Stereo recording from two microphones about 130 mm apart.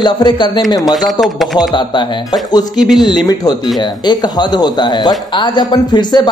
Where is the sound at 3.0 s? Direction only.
35° left (ahead or behind).